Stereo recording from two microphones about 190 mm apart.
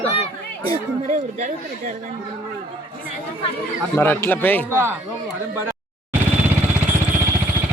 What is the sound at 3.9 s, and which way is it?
Speech, 10° left (ahead or behind).